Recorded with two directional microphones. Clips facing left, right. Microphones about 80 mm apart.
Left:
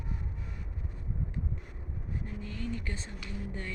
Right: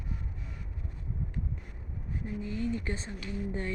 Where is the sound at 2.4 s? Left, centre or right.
Centre.